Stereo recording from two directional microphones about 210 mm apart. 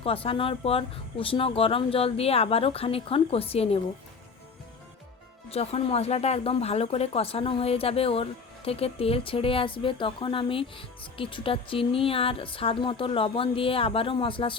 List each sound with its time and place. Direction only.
0.0 s speech: 25° left (ahead or behind)
5.5 s speech: 30° left (ahead or behind)